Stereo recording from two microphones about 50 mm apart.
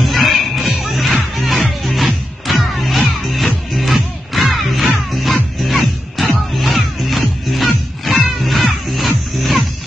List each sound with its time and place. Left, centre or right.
0.0 s music: centre